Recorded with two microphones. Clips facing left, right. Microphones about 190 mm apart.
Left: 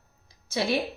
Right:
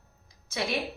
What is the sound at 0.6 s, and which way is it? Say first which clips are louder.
Speech: left 4 dB; 30° left (ahead or behind).